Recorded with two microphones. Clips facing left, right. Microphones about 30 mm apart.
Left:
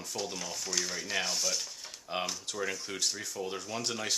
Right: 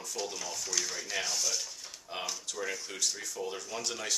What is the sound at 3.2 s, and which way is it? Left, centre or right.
Speech, centre.